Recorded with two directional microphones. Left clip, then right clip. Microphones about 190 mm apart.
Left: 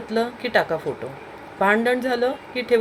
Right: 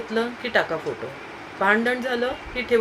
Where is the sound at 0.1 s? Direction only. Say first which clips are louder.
Left 2 dB; 30° left (ahead or behind).